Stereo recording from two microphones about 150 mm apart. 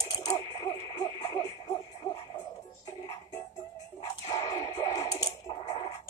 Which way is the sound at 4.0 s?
25° left (ahead or behind).